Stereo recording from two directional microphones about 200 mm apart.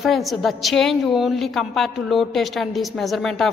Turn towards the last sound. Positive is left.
turn(degrees=0)  # may be behind; listen again after turning